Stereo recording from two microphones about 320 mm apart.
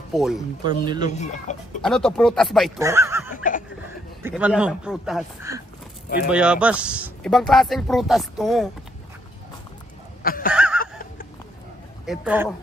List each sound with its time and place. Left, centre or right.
0.1 s speech: centre
0.7 s speech: centre
1.0 s speech: left
1.8 s speech: centre
10.2 s a sound: left
10.5 s a sound: centre
12.1 s speech: centre